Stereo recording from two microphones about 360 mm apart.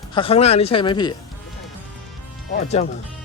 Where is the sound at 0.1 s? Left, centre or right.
Centre.